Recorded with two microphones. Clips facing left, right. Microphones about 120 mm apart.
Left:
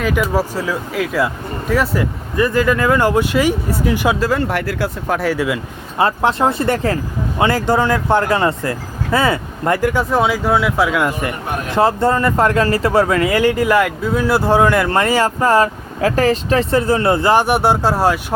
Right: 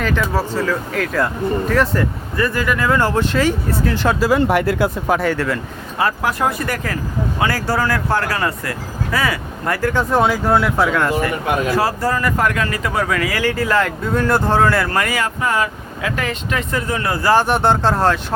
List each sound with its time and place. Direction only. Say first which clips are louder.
0.2 s speech: left 2 dB; 10° left (ahead or behind)
2.3 s speech: left 5 dB; 20° left (ahead or behind)
4.4 s speech: right 4 dB; 15° right (ahead or behind)
5.0 s speech: even; centre (ahead or behind)
6.0 s speech: left 4 dB; 25° left (ahead or behind)
9.9 s speech: even; 5° left (ahead or behind)
11.7 s speech: left 4 dB; 25° left (ahead or behind)